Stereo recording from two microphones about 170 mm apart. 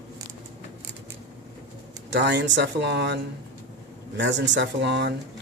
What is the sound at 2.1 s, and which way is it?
Speech, 90° right.